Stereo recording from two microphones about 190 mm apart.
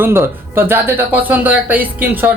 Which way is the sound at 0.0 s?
10° right (ahead or behind).